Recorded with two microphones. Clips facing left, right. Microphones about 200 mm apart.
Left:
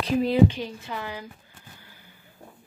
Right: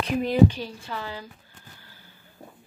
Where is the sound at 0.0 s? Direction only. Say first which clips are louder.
Left 2 dB; 30° left (ahead or behind).